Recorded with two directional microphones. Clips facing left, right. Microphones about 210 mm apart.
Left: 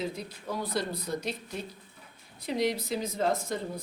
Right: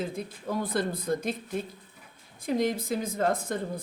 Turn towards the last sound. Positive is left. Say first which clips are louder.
# right 1 dB
turn(degrees=-55)  # may be behind; listen again after turning